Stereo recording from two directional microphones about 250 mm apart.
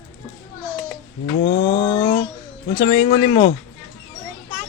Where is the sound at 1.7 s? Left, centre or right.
Centre.